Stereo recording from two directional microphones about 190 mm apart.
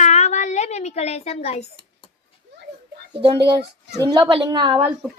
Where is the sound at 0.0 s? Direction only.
35° left (ahead or behind).